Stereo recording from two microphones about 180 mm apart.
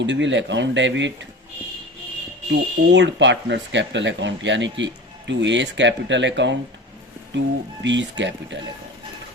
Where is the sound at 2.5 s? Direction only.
80° right.